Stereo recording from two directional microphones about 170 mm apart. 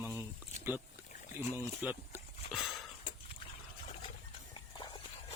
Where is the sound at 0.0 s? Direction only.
15° right (ahead or behind).